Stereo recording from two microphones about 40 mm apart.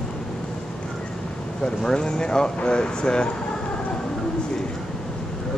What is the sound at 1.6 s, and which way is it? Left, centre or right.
Speech, centre.